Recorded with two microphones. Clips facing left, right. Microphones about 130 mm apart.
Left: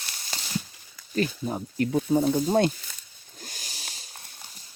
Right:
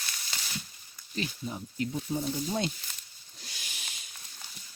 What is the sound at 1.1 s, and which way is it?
Speech, 50° left (ahead or behind).